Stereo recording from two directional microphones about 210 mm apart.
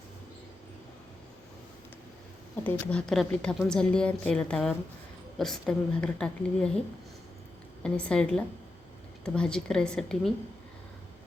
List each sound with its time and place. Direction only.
2.6 s a woman's voice: 5° left (ahead or behind)
7.8 s a woman's voice: 5° left (ahead or behind)